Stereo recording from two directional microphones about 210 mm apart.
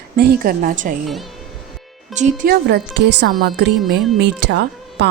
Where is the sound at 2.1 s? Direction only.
35° right (ahead or behind).